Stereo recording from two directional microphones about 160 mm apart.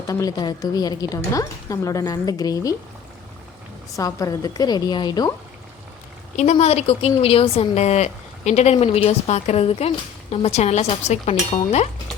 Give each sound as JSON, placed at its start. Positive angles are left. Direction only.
{"t": 0.1, "sound": "a woman's voice", "side_deg": 20}
{"t": 3.9, "sound": "a woman's voice", "side_deg": 20}
{"t": 6.3, "sound": "speech", "side_deg": 45}